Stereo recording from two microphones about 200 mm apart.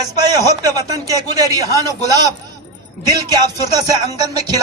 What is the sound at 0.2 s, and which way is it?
Speech, 20° right (ahead or behind).